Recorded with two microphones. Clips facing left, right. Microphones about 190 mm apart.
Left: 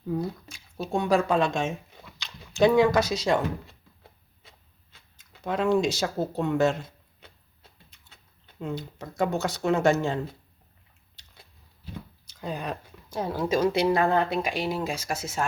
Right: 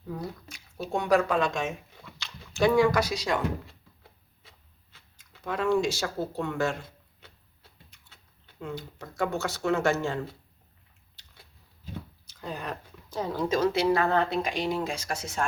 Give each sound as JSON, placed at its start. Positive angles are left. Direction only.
{"t": 0.2, "sound": "speech", "side_deg": 25}
{"t": 4.9, "sound": "speech", "side_deg": 20}
{"t": 7.2, "sound": "a sound", "side_deg": 20}
{"t": 8.6, "sound": "speech", "side_deg": 20}
{"t": 12.2, "sound": "speech", "side_deg": 15}